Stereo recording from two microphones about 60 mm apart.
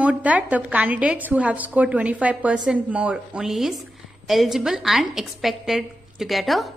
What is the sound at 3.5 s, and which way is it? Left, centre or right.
A woman's voice, centre.